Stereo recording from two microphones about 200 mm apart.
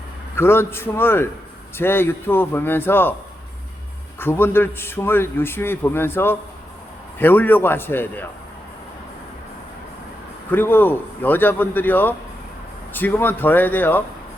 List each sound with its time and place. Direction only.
0.3 s a man's voice: 10° left (ahead or behind)
4.2 s a man's voice: 10° left (ahead or behind)
10.5 s a man's voice: 10° left (ahead or behind)